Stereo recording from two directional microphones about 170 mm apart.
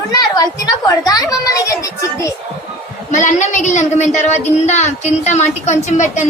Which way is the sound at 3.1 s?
45° left (ahead or behind).